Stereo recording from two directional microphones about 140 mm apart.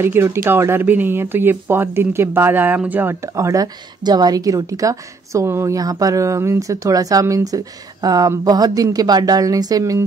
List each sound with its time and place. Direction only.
0.0 s speech: 15° right (ahead or behind)